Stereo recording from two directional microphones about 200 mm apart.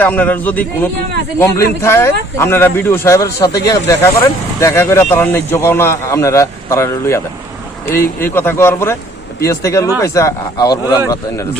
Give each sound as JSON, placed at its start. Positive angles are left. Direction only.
{"t": 0.0, "sound": "a man's voice", "side_deg": 10}